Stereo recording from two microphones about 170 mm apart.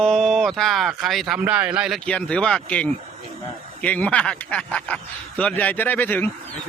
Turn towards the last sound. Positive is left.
turn(degrees=10)  # may be behind; listen again after turning